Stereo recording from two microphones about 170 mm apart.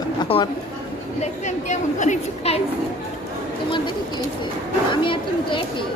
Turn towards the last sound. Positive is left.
turn(degrees=30)  # may be behind; listen again after turning